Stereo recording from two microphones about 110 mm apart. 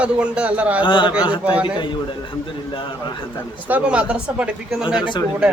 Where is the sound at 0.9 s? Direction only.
50° left (ahead or behind).